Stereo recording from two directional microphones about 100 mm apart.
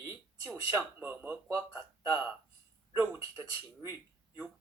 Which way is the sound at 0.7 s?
20° right (ahead or behind).